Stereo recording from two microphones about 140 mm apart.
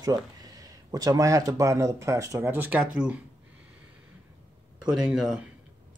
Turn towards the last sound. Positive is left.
turn(degrees=-5)  # may be behind; listen again after turning